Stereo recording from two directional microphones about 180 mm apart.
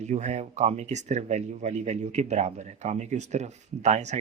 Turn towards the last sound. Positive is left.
turn(degrees=-40)  # may be behind; listen again after turning